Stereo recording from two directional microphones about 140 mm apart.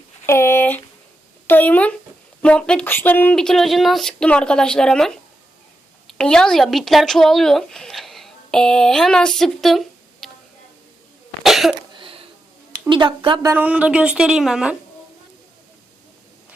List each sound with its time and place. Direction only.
0.3 s speech: 15° left (ahead or behind); by 10.2 s centre (ahead or behind)
11.4 s cough: centre (ahead or behind)
11.9 s a sound: 40° right (ahead or behind)
12.9 s a woman's voice: 35° right (ahead or behind)
13.5 s a woman's voice: 10° right (ahead or behind)